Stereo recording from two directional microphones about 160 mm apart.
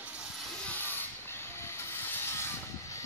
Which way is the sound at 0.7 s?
10° left (ahead or behind).